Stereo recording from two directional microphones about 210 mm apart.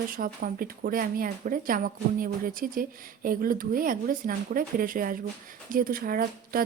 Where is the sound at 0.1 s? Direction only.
45° right (ahead or behind).